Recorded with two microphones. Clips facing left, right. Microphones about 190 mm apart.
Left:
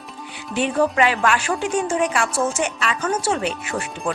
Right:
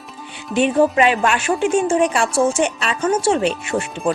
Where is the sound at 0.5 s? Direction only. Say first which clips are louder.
Right 4 dB; 20° right (ahead or behind).